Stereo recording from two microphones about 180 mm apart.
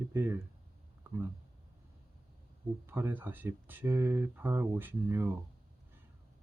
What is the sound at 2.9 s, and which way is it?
Speech, 10° right (ahead or behind).